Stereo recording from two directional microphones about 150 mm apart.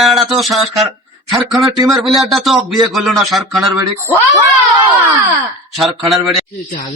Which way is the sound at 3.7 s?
20° right (ahead or behind).